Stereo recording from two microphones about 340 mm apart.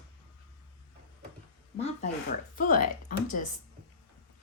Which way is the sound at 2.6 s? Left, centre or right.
Left.